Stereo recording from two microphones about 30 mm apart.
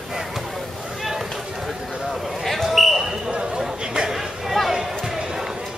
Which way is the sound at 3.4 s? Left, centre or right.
Right.